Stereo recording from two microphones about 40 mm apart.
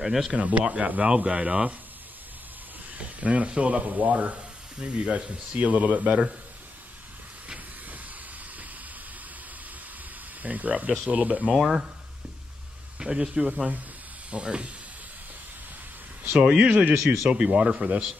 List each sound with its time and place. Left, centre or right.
0.0 s speech: centre
0.3 s speech: right
1.0 s speech: right
3.0 s speech: right
10.4 s speech: right
11.5 s speech: centre
13.0 s speech: right
16.3 s speech: right